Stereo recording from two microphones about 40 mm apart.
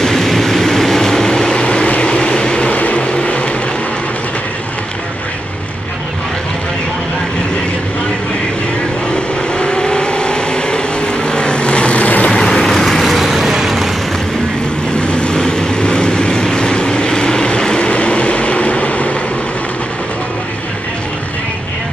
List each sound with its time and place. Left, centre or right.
0.0 s vehicle: centre; by 2.7 s left
2.7 s vehicle: left
9.1 s vehicle: left
12.3 s vehicle: centre
15.0 s vehicle: left